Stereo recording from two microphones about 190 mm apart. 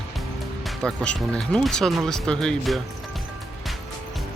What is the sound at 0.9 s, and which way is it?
Speech, 5° left (ahead or behind).